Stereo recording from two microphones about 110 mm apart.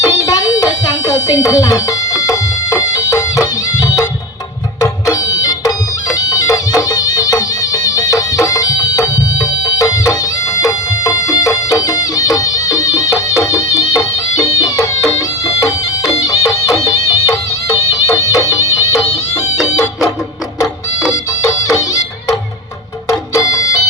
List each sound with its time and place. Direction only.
0.1 s music: 35° left (ahead or behind)
21.4 s music: 35° left (ahead or behind)